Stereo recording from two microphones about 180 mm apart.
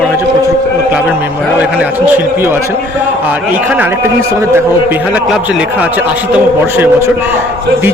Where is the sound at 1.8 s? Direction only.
10° right (ahead or behind).